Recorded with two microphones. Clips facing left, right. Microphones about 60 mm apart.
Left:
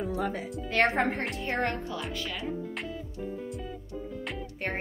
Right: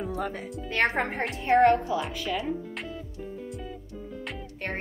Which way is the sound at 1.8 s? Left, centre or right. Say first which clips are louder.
Right 5 dB; centre.